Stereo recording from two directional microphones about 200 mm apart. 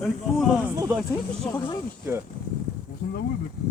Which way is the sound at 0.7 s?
15° right (ahead or behind).